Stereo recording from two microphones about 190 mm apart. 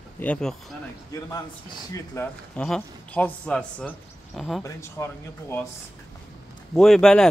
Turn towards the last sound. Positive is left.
turn(degrees=0)  # may be behind; listen again after turning